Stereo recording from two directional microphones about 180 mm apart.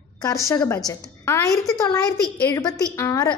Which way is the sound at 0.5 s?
20° left (ahead or behind).